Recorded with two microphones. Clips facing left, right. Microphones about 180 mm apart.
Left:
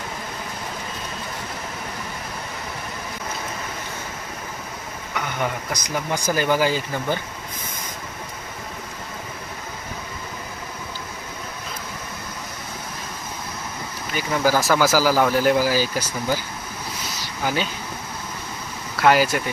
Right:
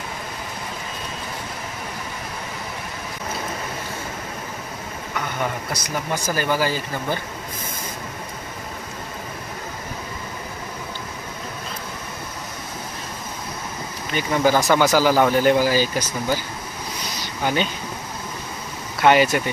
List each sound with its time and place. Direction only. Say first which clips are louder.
5.7 s speech: even; 15° left (ahead or behind)
14.2 s speech: right 2 dB; 5° left (ahead or behind)
17.4 s speech: right 2 dB; 5° left (ahead or behind)
19.0 s speech: right 1 dB; centre (ahead or behind)